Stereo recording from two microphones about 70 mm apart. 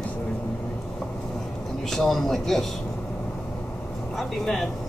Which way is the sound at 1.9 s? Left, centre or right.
Centre.